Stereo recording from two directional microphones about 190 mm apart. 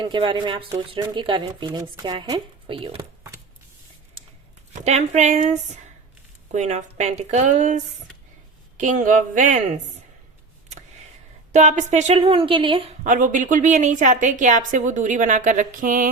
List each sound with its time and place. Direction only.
0.0 s speech: 25° right (ahead or behind)
4.7 s speech: 35° right (ahead or behind)
8.8 s speech: 40° right (ahead or behind)
11.5 s speech: 40° right (ahead or behind)
13.1 s speech: 40° right (ahead or behind)